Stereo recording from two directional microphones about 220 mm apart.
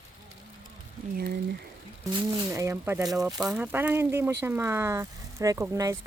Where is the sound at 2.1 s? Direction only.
15° right (ahead or behind).